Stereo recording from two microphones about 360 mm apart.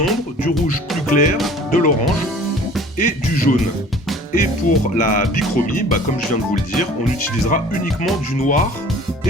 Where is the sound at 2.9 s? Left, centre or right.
Left.